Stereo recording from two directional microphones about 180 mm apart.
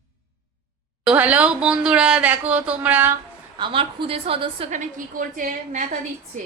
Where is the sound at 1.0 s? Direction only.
5° right (ahead or behind).